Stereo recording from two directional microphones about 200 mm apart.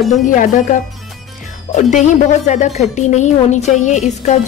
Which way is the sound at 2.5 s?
35° left (ahead or behind).